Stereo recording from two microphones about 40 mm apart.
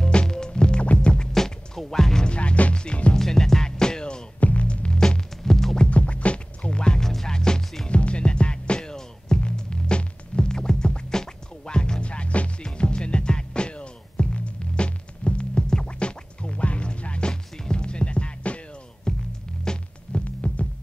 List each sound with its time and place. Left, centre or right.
0.0 s music: left
0.8 s music: left
1.3 s music: centre
2.2 s music: left
3.2 s music: centre
4.4 s music: left
4.6 s music: left
5.9 s music: left
7.0 s music: centre
7.9 s music: left
17.3 s music: centre
19.1 s music: centre
20.2 s heart sounds: left